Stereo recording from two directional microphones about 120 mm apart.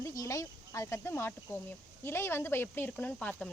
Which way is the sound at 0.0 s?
30° left (ahead or behind).